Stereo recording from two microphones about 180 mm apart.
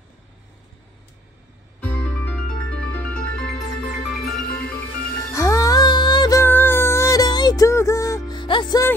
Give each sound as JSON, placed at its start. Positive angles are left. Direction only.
{"t": 1.8, "sound": "music", "side_deg": 10}
{"t": 5.3, "sound": "music", "side_deg": 15}